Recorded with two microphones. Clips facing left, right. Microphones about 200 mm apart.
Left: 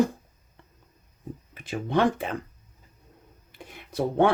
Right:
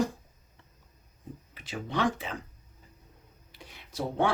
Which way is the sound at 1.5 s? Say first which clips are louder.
Left 7 dB; 55° left (ahead or behind).